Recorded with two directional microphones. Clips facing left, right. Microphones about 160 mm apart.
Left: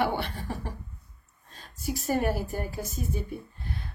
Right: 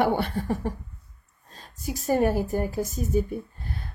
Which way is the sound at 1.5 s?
40° right (ahead or behind).